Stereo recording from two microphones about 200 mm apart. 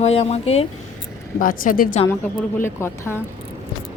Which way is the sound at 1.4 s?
45° left (ahead or behind).